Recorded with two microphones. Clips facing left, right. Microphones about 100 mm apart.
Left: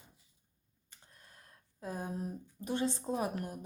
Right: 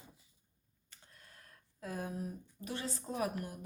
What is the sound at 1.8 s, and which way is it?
Speech, 20° left (ahead or behind).